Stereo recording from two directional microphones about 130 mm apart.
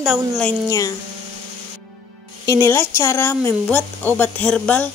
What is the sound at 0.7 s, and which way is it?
Speech, 25° left (ahead or behind).